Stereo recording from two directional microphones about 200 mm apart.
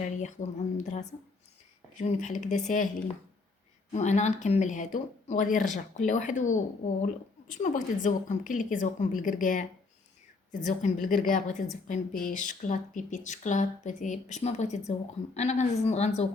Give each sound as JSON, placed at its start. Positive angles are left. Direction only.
{"t": 0.0, "sound": "speech", "side_deg": 35}
{"t": 3.9, "sound": "speech", "side_deg": 35}